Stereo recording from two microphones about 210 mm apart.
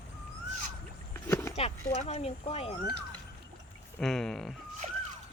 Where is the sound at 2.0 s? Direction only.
30° left (ahead or behind).